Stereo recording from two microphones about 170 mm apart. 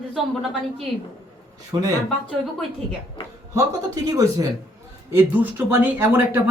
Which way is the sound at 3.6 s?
20° right (ahead or behind).